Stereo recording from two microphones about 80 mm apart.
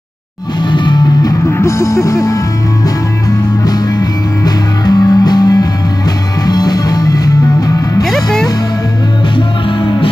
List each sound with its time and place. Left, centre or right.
0.6 s music: left
1.5 s music: left
3.6 s music: left
8.0 s music: centre